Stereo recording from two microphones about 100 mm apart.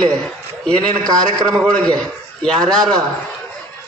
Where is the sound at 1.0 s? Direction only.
40° right (ahead or behind).